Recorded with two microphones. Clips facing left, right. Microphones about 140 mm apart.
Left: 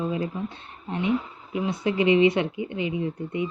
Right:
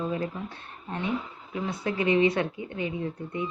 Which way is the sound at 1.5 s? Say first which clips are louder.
Left 5 dB; 20° left (ahead or behind).